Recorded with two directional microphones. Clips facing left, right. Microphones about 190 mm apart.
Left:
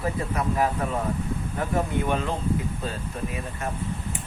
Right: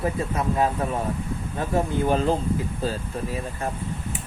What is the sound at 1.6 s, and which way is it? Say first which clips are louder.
Speech: right 3 dB; 35° right (ahead or behind).